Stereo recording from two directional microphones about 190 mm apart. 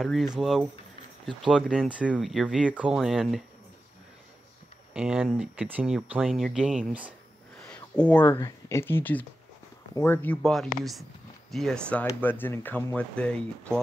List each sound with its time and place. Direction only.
0.0 s speech: centre (ahead or behind)
4.9 s speech: 5° right (ahead or behind)
7.6 s a sound: 5° left (ahead or behind)
8.4 s speech: 20° left (ahead or behind)